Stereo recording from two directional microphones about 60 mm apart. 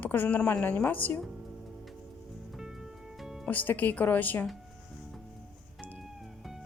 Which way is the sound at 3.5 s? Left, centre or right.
Left.